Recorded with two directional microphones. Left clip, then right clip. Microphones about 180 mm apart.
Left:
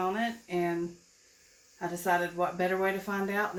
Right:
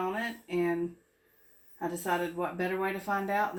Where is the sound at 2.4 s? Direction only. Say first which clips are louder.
Left 3 dB; 15° right (ahead or behind).